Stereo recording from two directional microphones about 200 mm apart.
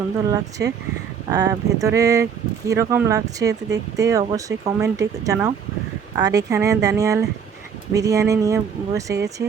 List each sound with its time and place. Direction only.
0.3 s speech: 15° right (ahead or behind)